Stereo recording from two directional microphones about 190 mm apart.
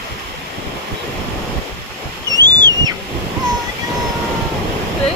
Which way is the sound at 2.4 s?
20° right (ahead or behind).